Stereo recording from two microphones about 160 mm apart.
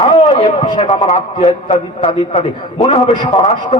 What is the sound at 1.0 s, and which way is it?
Speech, 40° left (ahead or behind).